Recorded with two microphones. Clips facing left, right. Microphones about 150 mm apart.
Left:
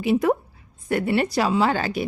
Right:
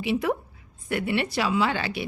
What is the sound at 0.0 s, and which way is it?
A woman's voice, 45° left (ahead or behind).